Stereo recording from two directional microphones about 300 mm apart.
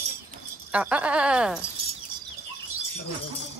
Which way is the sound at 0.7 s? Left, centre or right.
Centre.